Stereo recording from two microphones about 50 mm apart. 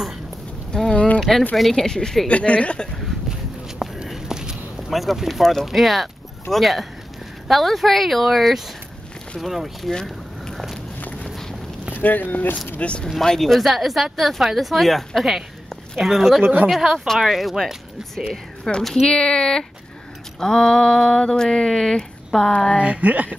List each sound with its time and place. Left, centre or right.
0.9 s a sound: left
1.6 s a sound: centre
2.2 s speech: left
4.1 s walk: centre
4.8 s speech: centre
10.5 s walk: centre
11.9 s speech: left
12.7 s speech: left
13.4 s speech: centre
18.6 s a sound: centre
19.0 s a sound: centre
22.8 s speech: right